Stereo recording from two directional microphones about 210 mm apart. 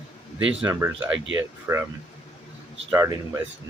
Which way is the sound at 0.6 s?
5° right (ahead or behind).